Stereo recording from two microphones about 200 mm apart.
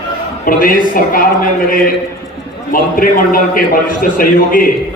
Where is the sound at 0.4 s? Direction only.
45° left (ahead or behind).